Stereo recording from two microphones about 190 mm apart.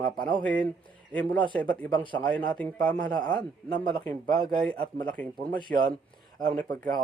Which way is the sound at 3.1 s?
20° left (ahead or behind).